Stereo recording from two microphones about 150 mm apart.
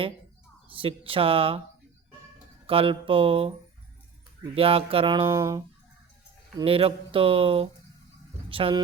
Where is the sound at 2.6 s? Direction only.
40° right (ahead or behind).